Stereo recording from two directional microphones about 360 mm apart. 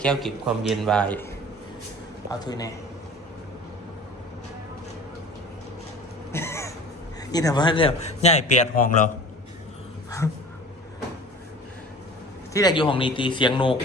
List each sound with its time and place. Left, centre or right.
0.0 s a man's voice: centre
2.3 s a man's voice: centre
6.3 s a sound: centre
7.3 s a man's voice: centre
12.5 s a man's voice: centre